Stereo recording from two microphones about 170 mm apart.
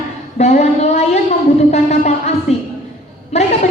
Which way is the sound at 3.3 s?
40° left (ahead or behind).